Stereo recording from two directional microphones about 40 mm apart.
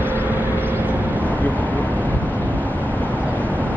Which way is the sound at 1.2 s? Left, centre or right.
Left.